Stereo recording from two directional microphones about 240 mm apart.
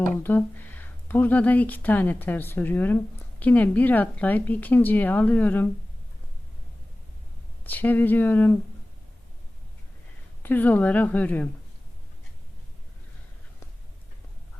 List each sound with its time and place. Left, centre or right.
0.1 s speech: centre
7.6 s speech: centre
10.4 s speech: centre